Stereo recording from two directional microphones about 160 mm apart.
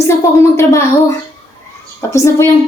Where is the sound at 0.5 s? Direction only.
15° left (ahead or behind).